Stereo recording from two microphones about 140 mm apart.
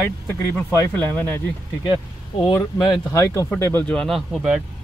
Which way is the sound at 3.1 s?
20° left (ahead or behind).